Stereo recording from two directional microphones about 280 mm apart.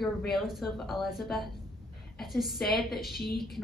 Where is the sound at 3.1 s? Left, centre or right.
Left.